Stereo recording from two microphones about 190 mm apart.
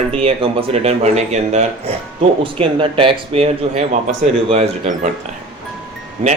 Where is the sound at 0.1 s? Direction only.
30° right (ahead or behind).